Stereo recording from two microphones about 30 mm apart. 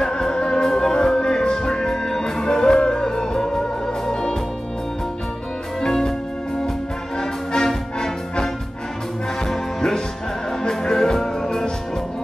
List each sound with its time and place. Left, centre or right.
0.0 s music: left
5.8 s music: centre
7.2 s music: centre